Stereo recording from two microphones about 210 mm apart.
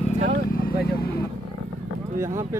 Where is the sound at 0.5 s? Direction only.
45° left (ahead or behind).